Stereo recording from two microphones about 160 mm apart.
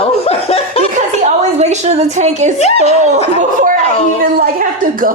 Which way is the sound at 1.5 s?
45° right (ahead or behind).